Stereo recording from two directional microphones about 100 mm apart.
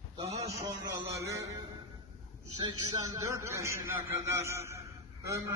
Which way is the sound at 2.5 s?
50° right (ahead or behind).